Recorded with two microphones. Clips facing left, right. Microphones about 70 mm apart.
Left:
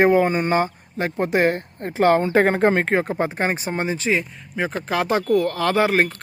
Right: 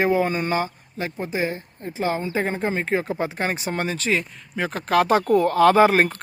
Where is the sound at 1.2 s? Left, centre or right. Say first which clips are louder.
Left 8 dB; left.